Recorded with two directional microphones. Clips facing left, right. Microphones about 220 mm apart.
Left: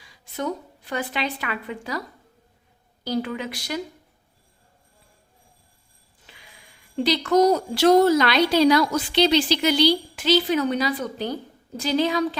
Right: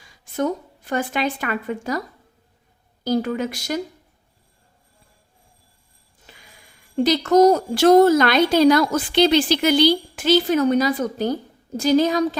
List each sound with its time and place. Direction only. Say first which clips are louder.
0.0 s a woman's voice: right 6 dB; 45° right (ahead or behind)
3.0 s speech: right 5 dB; 45° right (ahead or behind)
6.2 s speech: right 2 dB; 45° right (ahead or behind)